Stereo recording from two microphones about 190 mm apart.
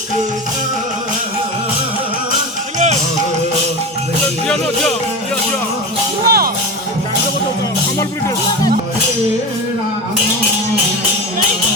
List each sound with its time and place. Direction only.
2.7 s music: 35° right (ahead or behind)
4.4 s speech: centre (ahead or behind)
6.2 s music: 55° right (ahead or behind)